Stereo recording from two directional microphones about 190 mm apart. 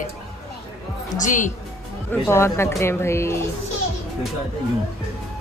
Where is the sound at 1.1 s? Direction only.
40° left (ahead or behind).